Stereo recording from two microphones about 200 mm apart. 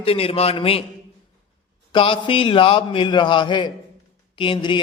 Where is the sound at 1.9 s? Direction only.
25° left (ahead or behind).